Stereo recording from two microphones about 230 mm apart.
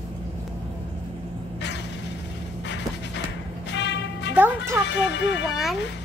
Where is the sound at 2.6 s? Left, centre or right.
Left.